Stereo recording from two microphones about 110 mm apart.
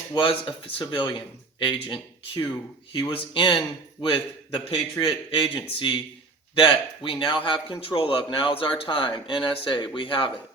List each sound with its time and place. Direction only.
0.1 s a man's voice: 50° left (ahead or behind)
4.9 s a man's voice: 50° left (ahead or behind)